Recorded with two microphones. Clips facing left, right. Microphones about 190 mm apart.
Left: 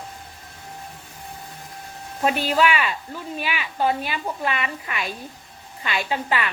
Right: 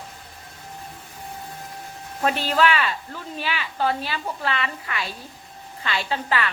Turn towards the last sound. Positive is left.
turn(degrees=15)  # may be behind; listen again after turning